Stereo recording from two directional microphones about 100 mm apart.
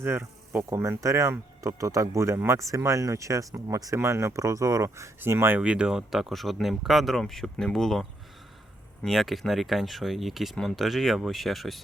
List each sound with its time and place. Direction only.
0.0 s speech: 25° right (ahead or behind)
5.5 s speech: 10° right (ahead or behind)